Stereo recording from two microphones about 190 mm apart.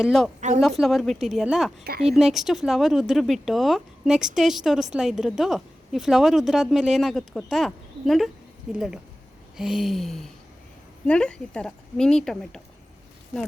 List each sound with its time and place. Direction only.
0.0 s a woman's voice: centre (ahead or behind)
0.3 s speech: 40° right (ahead or behind)
0.8 s a woman's voice: centre (ahead or behind)